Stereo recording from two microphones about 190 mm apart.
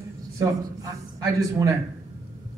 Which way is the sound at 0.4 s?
15° right (ahead or behind).